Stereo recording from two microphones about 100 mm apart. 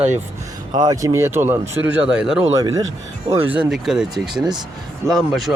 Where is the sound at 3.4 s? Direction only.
15° right (ahead or behind).